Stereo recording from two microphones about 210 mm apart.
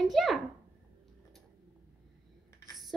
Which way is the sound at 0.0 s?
Centre (ahead or behind).